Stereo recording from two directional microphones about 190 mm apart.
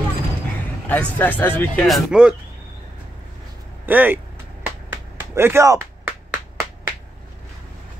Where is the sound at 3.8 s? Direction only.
10° right (ahead or behind).